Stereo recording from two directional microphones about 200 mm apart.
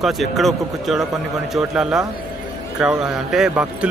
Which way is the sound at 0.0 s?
Centre (ahead or behind).